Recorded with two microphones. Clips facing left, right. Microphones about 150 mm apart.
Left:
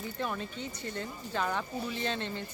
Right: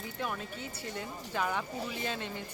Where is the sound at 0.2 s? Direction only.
5° right (ahead or behind).